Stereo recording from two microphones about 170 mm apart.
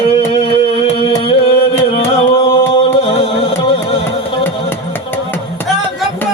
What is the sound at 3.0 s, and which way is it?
Music, 40° left (ahead or behind).